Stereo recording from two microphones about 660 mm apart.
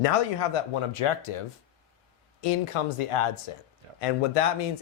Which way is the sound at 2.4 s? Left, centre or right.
Left.